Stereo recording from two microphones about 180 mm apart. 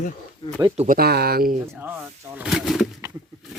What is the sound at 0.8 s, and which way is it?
Speech, 50° right (ahead or behind).